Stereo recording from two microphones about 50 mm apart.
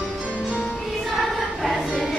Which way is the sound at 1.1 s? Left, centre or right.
Centre.